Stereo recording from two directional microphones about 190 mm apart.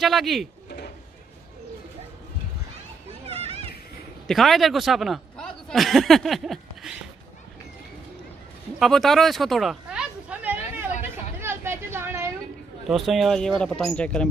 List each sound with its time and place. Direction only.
0.0 s speech: centre (ahead or behind)
0.7 s a sound: 55° left (ahead or behind)
3.1 s children playing: 30° right (ahead or behind)
4.3 s speech: centre (ahead or behind)
8.7 s a sound: centre (ahead or behind)
12.8 s speech: centre (ahead or behind)